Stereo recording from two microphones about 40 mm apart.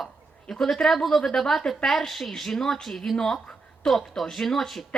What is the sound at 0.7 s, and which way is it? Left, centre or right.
A woman's voice, centre.